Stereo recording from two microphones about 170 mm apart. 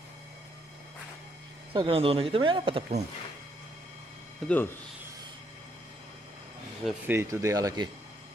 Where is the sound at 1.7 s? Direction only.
35° right (ahead or behind).